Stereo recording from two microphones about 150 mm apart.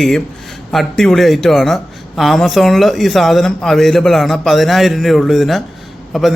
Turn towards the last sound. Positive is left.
turn(degrees=0)  # may be behind; listen again after turning